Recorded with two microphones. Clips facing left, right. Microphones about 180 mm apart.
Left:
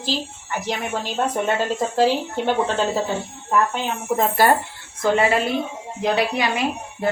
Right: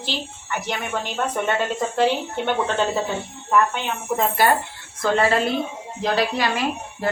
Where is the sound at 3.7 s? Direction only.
40° left (ahead or behind).